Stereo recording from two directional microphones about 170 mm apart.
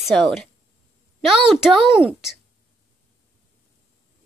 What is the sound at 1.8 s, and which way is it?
Speech, 30° right (ahead or behind).